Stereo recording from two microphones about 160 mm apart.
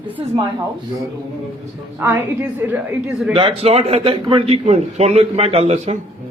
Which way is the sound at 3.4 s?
35° right (ahead or behind).